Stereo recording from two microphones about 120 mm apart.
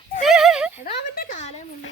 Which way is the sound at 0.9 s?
75° left (ahead or behind).